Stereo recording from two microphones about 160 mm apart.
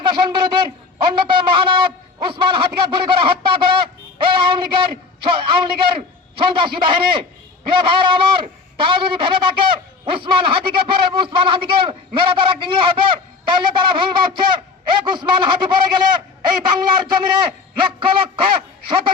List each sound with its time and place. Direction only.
0.0 s a man's voice: 30° right (ahead or behind)